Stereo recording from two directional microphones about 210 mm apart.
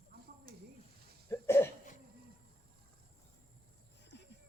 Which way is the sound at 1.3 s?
10° left (ahead or behind).